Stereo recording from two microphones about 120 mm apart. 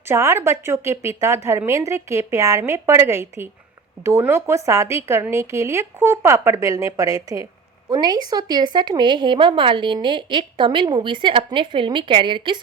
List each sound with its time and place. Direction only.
0.1 s speech: 25° right (ahead or behind); by 12.6 s 40° right (ahead or behind)